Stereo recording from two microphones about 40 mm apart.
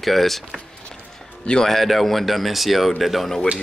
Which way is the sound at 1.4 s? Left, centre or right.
Centre.